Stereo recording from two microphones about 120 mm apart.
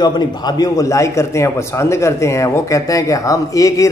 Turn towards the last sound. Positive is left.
turn(degrees=25)  # may be behind; listen again after turning